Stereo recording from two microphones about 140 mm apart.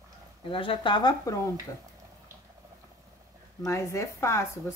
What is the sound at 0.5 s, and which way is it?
Speech, 40° left (ahead or behind).